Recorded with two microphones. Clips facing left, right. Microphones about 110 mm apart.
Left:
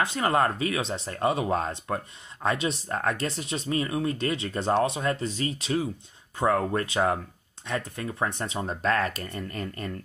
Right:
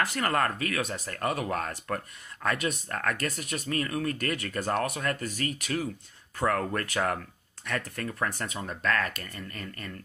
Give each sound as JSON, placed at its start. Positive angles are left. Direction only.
{"t": 0.0, "sound": "speech", "side_deg": 20}